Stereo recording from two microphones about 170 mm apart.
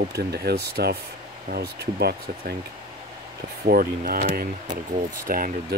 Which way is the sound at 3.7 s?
60° right (ahead or behind).